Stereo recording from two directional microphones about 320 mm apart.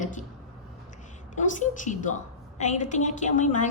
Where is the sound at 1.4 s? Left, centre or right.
Left.